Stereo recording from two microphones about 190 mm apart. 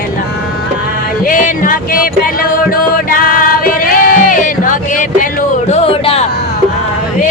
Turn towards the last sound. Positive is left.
turn(degrees=30)  # may be behind; listen again after turning